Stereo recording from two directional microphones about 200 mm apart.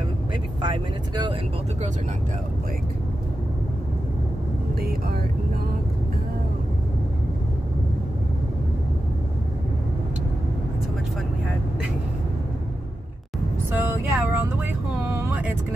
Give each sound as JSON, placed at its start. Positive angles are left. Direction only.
{"t": 0.7, "sound": "speech", "side_deg": -20}
{"t": 4.7, "sound": "vehicle", "side_deg": -50}
{"t": 13.7, "sound": "vehicle", "side_deg": -10}